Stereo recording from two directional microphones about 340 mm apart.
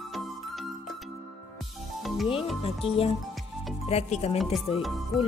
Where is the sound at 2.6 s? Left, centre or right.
Centre.